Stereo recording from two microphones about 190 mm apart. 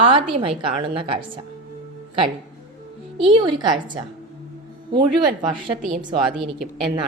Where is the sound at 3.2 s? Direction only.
25° right (ahead or behind).